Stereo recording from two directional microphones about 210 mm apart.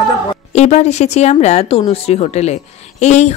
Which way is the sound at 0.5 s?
30° left (ahead or behind).